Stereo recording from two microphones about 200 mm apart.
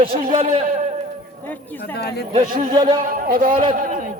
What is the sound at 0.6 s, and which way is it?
Speech, 40° right (ahead or behind).